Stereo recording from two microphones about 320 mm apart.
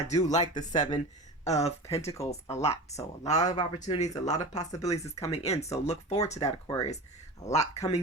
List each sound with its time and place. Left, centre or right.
0.2 s speech: left
3.3 s speech: left